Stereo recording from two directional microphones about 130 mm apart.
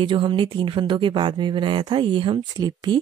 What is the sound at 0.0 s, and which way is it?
Speech, 40° right (ahead or behind).